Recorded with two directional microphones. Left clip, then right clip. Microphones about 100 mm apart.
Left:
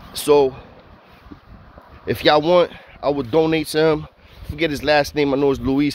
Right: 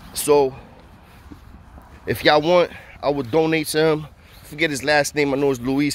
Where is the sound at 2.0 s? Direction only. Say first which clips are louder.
Left 1 dB; 5° left (ahead or behind).